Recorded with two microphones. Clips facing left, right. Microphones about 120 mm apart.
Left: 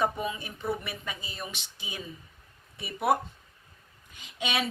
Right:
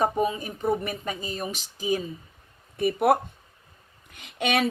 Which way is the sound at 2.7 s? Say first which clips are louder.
Right 6 dB; 55° right (ahead or behind).